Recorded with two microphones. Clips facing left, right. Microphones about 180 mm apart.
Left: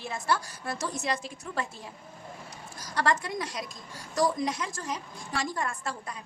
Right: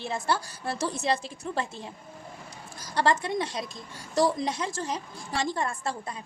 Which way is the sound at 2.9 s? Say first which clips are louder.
Right 3 dB; 25° right (ahead or behind).